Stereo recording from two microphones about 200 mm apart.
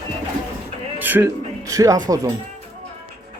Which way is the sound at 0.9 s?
10° right (ahead or behind).